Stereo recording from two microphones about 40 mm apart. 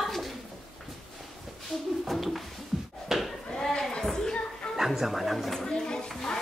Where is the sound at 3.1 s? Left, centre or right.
Centre.